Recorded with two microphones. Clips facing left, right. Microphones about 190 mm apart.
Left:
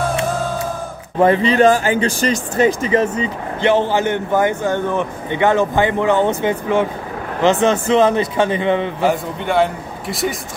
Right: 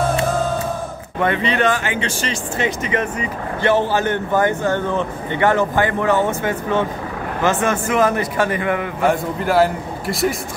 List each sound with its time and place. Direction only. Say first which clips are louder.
1.2 s speech: left 6 dB; 35° left (ahead or behind)
9.0 s a man's voice: even; centre (ahead or behind)